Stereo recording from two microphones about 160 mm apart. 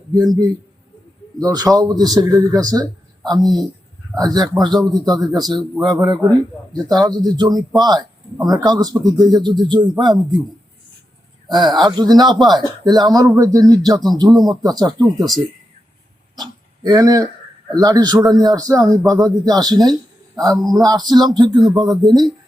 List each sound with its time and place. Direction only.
0.1 s speech: 25° right (ahead or behind)
4.7 s a man's voice: centre (ahead or behind)
4.9 s speech: 25° right (ahead or behind)
11.4 s speech: 25° right (ahead or behind)
16.3 s a sound: 25° right (ahead or behind)
17.7 s speech: 25° right (ahead or behind)